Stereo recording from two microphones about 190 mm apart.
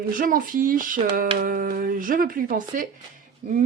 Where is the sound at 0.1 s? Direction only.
45° right (ahead or behind).